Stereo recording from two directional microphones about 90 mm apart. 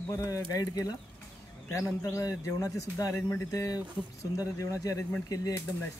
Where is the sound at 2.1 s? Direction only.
35° left (ahead or behind).